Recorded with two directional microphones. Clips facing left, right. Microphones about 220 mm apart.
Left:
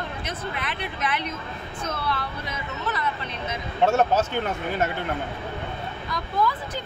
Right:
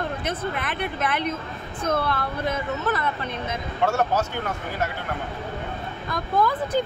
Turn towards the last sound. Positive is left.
turn(degrees=-50)  # may be behind; listen again after turning